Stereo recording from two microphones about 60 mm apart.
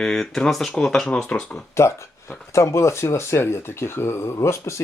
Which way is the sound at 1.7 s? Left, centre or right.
Left.